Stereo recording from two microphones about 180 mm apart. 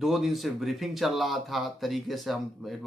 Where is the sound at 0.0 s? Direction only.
Centre (ahead or behind).